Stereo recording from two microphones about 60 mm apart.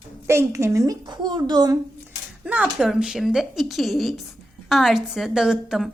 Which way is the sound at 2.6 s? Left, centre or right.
Centre.